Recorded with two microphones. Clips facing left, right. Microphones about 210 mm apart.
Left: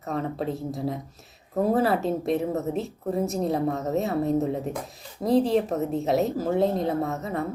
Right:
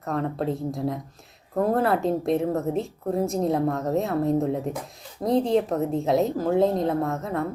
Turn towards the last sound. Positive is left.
turn(degrees=0)  # may be behind; listen again after turning